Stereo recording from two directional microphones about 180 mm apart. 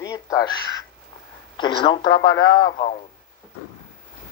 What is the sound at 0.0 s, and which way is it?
Crow, 20° left (ahead or behind).